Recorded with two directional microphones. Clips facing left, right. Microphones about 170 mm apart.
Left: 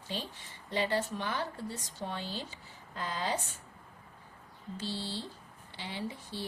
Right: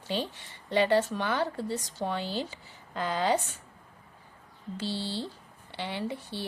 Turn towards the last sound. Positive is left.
turn(degrees=-65)  # may be behind; listen again after turning